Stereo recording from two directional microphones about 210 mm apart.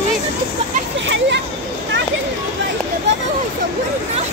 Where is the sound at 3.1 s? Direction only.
55° right (ahead or behind).